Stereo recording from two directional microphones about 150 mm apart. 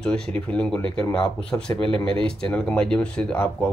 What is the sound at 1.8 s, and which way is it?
Speech, 35° right (ahead or behind).